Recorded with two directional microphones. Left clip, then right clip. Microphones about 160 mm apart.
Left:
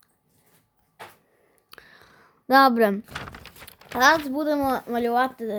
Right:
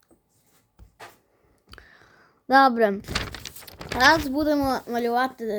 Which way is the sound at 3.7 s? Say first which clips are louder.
Even; 5° right (ahead or behind).